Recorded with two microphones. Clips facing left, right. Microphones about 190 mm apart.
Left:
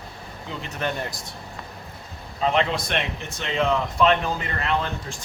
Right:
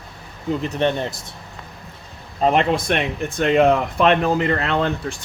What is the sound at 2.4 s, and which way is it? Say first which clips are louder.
Speech: right 5 dB; 50° right (ahead or behind).